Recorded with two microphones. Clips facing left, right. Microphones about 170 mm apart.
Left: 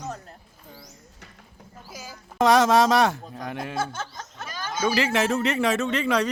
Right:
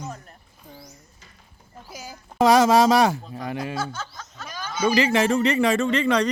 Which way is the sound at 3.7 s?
55° left (ahead or behind).